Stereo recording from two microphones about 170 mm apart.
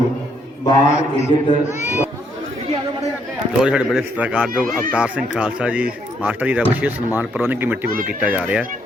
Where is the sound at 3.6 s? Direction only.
5° right (ahead or behind).